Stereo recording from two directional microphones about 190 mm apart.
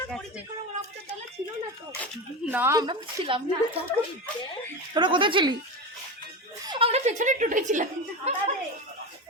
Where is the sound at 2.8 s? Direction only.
25° right (ahead or behind).